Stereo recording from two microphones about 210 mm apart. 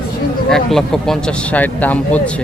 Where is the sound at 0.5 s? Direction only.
Centre (ahead or behind).